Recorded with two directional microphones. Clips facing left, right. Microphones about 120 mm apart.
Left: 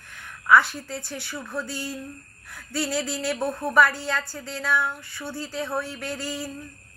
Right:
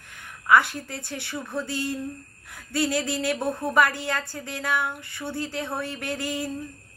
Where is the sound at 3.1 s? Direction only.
20° right (ahead or behind).